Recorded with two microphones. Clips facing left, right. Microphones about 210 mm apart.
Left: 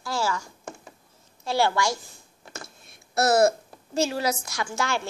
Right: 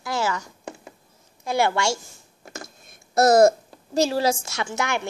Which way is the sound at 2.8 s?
45° right (ahead or behind).